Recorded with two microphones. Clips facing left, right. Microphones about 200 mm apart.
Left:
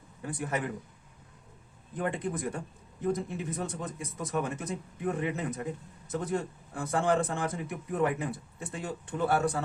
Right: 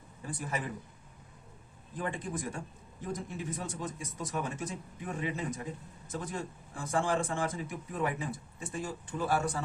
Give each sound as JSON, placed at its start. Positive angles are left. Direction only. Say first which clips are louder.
{"t": 0.2, "sound": "speech", "louder": "left 4 dB", "side_deg": 60}
{"t": 2.0, "sound": "speech", "louder": "left 4 dB", "side_deg": 60}